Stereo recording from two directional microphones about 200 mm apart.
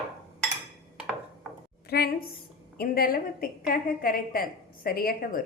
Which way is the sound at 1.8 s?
50° left (ahead or behind).